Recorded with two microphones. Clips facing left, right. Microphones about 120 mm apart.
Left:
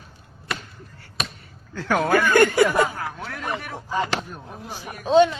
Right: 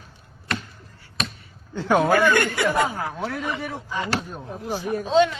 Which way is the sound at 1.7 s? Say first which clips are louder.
Right 3 dB; 25° right (ahead or behind).